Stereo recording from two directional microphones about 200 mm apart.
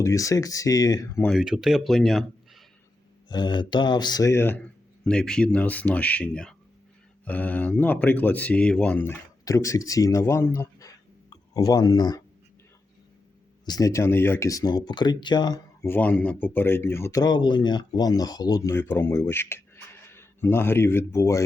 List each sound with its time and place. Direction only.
0.0 s speech: 15° left (ahead or behind)
1.3 s speech: centre (ahead or behind)
3.2 s speech: 20° left (ahead or behind)
13.7 s speech: 15° left (ahead or behind)